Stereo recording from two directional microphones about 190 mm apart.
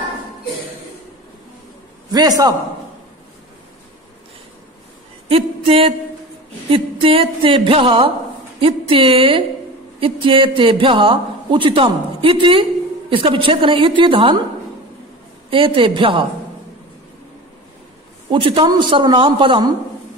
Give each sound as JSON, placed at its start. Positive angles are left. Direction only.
{"t": 2.1, "sound": "a man's voice", "side_deg": -20}
{"t": 5.3, "sound": "music", "side_deg": -30}
{"t": 6.7, "sound": "a man's voice", "side_deg": -30}
{"t": 15.5, "sound": "a man's voice", "side_deg": -25}
{"t": 18.3, "sound": "a man's voice", "side_deg": -25}